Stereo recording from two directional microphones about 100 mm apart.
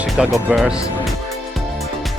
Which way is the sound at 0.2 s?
5° right (ahead or behind).